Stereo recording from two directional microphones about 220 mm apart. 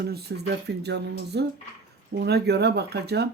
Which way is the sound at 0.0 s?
45° right (ahead or behind).